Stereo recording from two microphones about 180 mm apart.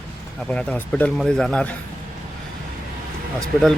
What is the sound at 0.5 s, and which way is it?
Speech, 5° left (ahead or behind).